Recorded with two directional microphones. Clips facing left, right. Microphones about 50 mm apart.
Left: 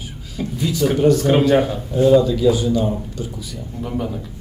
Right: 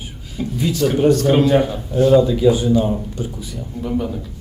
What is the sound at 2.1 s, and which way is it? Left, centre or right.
Speech, centre.